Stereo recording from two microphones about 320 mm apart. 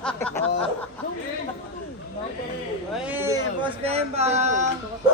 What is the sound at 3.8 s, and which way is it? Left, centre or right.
Speech, centre.